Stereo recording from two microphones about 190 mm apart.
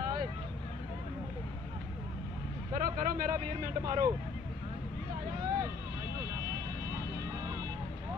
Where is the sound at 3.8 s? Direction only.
20° right (ahead or behind).